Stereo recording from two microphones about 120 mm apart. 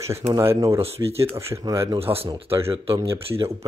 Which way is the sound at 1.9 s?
55° right (ahead or behind).